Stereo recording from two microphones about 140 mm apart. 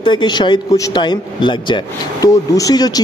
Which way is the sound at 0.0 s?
35° left (ahead or behind).